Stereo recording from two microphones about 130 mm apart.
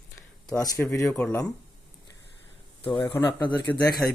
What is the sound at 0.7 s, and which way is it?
Speech, 20° left (ahead or behind).